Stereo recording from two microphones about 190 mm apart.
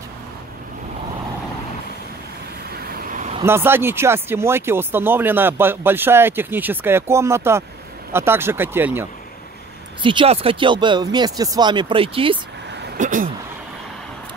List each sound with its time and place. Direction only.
2.7 s vehicle: 50° right (ahead or behind)
3.4 s speech: 10° right (ahead or behind)
10.0 s speech: 30° right (ahead or behind)
12.9 s speech: 45° right (ahead or behind)